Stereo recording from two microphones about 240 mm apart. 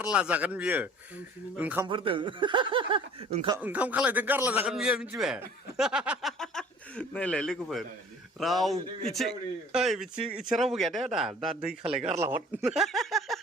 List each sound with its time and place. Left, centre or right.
0.0 s a man's voice: centre
1.9 s speech: right
3.6 s a man's voice: centre